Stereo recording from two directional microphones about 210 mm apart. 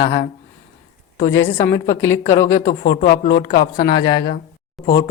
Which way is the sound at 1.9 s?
15° left (ahead or behind).